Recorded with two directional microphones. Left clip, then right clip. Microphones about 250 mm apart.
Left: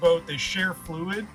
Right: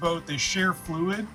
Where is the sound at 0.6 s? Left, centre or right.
Centre.